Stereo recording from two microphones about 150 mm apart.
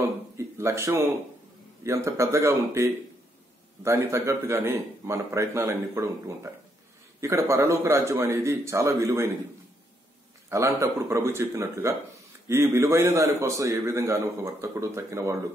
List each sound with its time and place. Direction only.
0.6 s a man's voice: 20° right (ahead or behind)
10.5 s a man's voice: 20° right (ahead or behind)